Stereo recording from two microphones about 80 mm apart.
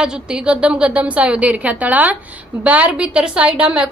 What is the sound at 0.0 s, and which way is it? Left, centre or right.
A woman's voice, centre.